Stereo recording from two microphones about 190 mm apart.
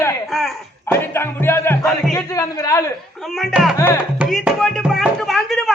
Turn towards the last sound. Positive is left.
turn(degrees=0)  # may be behind; listen again after turning